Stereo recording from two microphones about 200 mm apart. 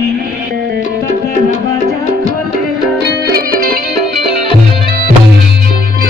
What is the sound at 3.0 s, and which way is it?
Music, 50° right (ahead or behind).